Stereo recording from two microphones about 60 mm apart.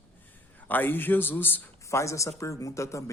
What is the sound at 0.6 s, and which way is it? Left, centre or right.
Speech, left.